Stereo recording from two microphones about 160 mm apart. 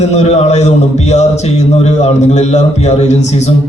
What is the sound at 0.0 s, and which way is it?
A man's voice, 45° left (ahead or behind).